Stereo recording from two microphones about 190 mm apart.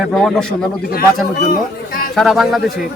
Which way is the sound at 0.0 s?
Centre (ahead or behind).